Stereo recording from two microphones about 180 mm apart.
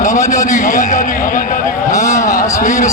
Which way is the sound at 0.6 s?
45° left (ahead or behind).